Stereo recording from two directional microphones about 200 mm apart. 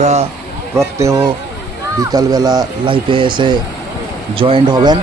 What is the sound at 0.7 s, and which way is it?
Speech, 15° right (ahead or behind).